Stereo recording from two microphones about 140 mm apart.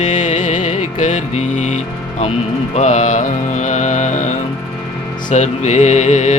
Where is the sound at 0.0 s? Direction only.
60° left (ahead or behind).